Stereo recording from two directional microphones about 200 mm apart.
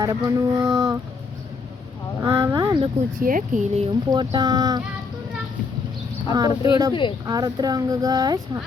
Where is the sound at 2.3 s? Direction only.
15° right (ahead or behind).